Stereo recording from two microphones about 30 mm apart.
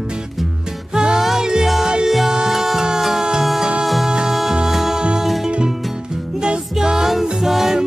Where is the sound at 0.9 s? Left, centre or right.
Right.